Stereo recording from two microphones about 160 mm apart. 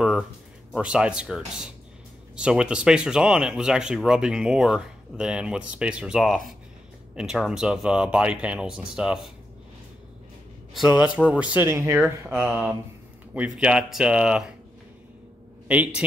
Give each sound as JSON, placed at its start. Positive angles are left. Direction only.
{"t": 0.7, "sound": "speech", "side_deg": -5}
{"t": 10.7, "sound": "a man's voice", "side_deg": -5}
{"t": 15.7, "sound": "speech", "side_deg": -10}